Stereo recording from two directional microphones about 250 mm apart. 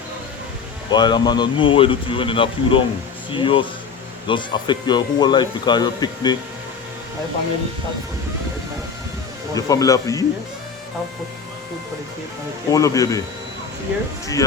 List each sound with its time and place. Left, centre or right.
0.9 s speech: centre
9.6 s speech: centre
12.7 s speech: centre